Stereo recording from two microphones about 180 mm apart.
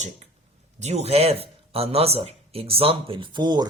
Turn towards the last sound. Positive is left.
turn(degrees=-25)  # may be behind; listen again after turning